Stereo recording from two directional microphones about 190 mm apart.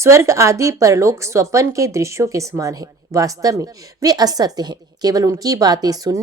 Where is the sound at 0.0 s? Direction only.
15° right (ahead or behind).